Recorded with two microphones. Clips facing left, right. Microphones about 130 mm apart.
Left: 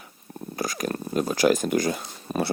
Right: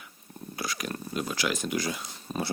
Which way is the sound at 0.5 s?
45° left (ahead or behind).